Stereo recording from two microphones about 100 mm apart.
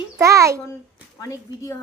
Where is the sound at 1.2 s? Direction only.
30° left (ahead or behind).